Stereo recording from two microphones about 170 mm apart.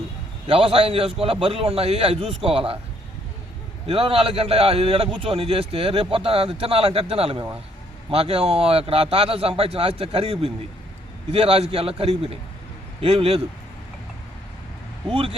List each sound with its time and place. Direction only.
0.4 s a man's voice: 35° right (ahead or behind)
3.8 s a man's voice: 35° right (ahead or behind)
15.1 s a man's voice: 30° right (ahead or behind)